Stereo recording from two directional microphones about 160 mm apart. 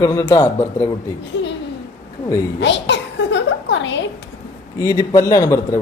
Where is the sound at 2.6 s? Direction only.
90° left.